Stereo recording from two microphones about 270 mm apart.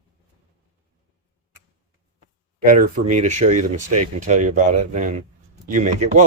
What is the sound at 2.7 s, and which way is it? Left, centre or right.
Speech, right.